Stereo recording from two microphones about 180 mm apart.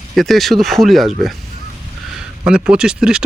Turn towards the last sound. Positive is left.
turn(degrees=-5)  # may be behind; listen again after turning